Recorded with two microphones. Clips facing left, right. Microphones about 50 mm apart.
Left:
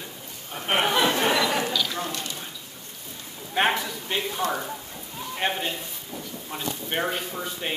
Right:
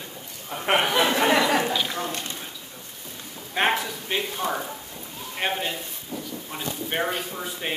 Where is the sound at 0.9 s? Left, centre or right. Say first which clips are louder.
Right 2 dB; right.